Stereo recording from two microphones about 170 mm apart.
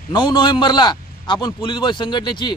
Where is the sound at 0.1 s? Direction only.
25° left (ahead or behind).